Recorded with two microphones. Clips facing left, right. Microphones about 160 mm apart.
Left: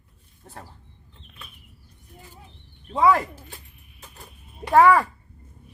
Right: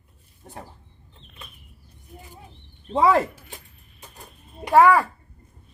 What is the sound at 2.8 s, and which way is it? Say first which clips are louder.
Speech: right 1 dB; 30° right (ahead or behind).